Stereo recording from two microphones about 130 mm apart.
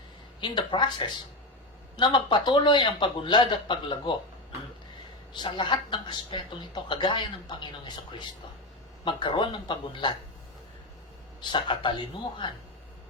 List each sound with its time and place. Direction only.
0.4 s a man's voice: 35° left (ahead or behind)
5.3 s a man's voice: 40° left (ahead or behind)
9.0 s a man's voice: 40° left (ahead or behind)
11.3 s a man's voice: 35° left (ahead or behind)